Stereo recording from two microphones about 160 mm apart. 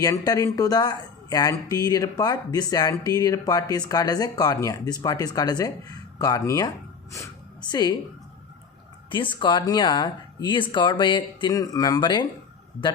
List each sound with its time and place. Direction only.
0.0 s speech: 20° left (ahead or behind)
7.7 s speech: 25° left (ahead or behind)
9.0 s speech: 30° left (ahead or behind)